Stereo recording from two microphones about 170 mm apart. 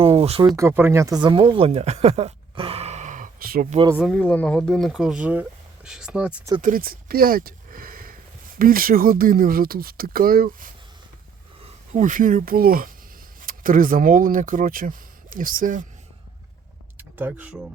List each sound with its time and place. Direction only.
0.0 s speech: 35° right (ahead or behind)
0.5 s speech: 15° right (ahead or behind); by 3.7 s 55° right (ahead or behind)
3.9 s speech: centre (ahead or behind)
4.2 s speech: 10° left (ahead or behind); by 6.5 s 10° right (ahead or behind)
6.6 s speech: 55° right (ahead or behind)
11.9 s speech: 45° right (ahead or behind)
17.0 s speech: 10° right (ahead or behind)